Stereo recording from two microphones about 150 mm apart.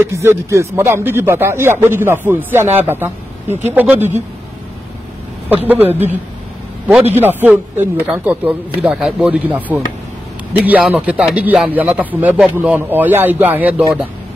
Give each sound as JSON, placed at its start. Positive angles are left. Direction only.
{"t": 0.0, "sound": "speech", "side_deg": -15}
{"t": 5.7, "sound": "speech", "side_deg": -15}
{"t": 7.2, "sound": "speech", "side_deg": -15}